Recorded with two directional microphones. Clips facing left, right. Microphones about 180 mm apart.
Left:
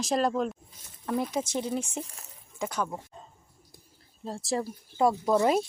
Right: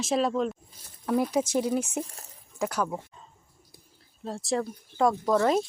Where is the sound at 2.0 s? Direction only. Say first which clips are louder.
Right 5 dB; 35° right (ahead or behind).